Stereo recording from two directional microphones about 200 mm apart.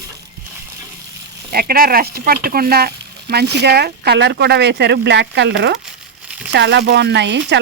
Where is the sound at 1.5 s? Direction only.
50° right (ahead or behind).